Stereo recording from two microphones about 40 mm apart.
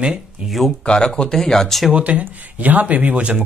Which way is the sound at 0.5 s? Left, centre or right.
Centre.